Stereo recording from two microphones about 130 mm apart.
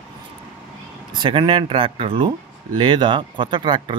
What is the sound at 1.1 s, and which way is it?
Speech, 40° right (ahead or behind).